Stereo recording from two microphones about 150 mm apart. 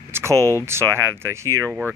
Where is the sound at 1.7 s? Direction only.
10° right (ahead or behind).